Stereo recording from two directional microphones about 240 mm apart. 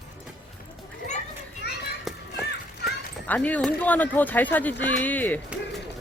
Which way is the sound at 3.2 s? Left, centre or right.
Centre.